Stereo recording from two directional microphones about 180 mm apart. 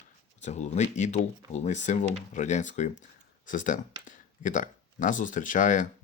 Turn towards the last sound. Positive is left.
turn(degrees=45)  # may be behind; listen again after turning